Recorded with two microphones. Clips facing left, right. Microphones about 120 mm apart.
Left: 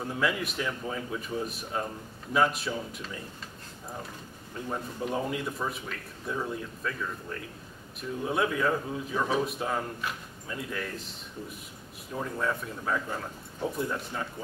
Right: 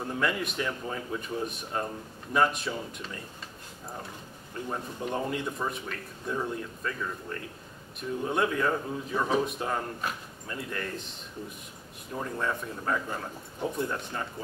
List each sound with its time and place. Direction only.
0.0 s speech: centre (ahead or behind)
4.6 s speech: centre (ahead or behind)